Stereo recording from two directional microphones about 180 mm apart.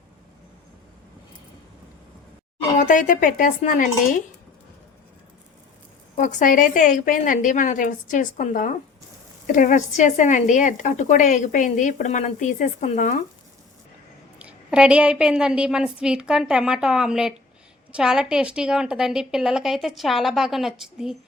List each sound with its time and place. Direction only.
2.7 s speech: 45° left (ahead or behind)
6.1 s speech: 45° left (ahead or behind)
14.3 s a woman's voice: 5° right (ahead or behind)